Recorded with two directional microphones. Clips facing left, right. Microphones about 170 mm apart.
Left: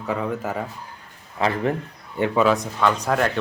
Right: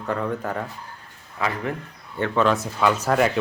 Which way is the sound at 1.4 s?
30° left (ahead or behind).